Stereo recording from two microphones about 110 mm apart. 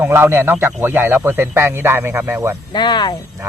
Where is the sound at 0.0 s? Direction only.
20° right (ahead or behind).